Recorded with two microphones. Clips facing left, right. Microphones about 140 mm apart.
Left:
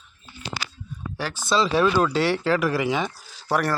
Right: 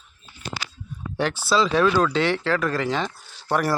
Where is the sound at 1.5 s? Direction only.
5° left (ahead or behind).